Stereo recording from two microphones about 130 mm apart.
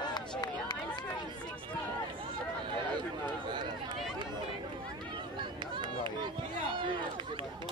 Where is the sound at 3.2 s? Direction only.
35° right (ahead or behind).